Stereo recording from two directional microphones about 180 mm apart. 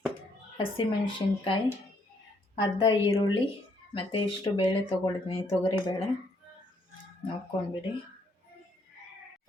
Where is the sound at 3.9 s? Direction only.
30° left (ahead or behind).